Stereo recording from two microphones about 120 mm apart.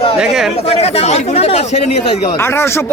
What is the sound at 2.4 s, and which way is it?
Speech, 20° left (ahead or behind).